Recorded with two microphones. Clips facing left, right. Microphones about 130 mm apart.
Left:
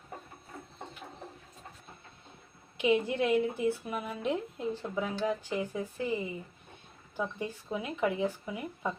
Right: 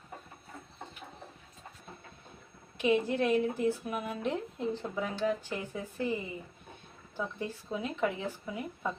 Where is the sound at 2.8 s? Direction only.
15° left (ahead or behind).